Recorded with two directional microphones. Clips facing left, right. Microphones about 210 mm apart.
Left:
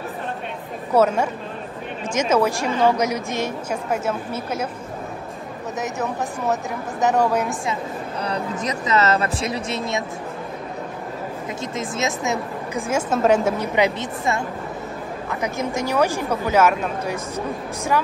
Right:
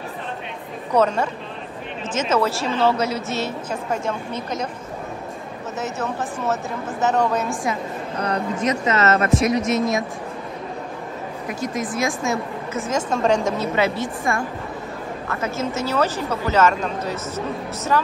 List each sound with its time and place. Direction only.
0.9 s a woman's voice: 10° left (ahead or behind)
5.8 s a woman's voice: 15° left (ahead or behind)
8.2 s speech: 35° left (ahead or behind)
11.4 s a woman's voice: 25° left (ahead or behind)